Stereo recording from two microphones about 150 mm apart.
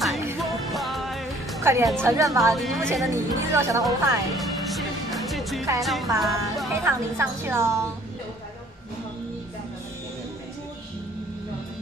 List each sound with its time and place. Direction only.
0.4 s music: centre (ahead or behind)
1.6 s a woman's voice: 20° right (ahead or behind)
2.5 s speech: centre (ahead or behind)
3.1 s a woman's voice: 20° right (ahead or behind)
3.8 s music: centre (ahead or behind)
5.8 s speech: centre (ahead or behind)
6.7 s a woman's voice: 20° right (ahead or behind)